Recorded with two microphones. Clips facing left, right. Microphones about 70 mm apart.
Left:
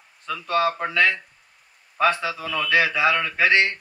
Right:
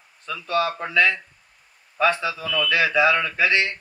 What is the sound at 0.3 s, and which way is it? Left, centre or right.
Speech, left.